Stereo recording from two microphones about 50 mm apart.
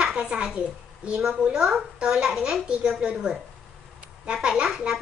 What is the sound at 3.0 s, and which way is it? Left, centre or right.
Speech, centre.